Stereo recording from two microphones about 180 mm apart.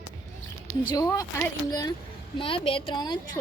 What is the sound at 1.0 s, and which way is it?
A woman's voice, 15° left (ahead or behind).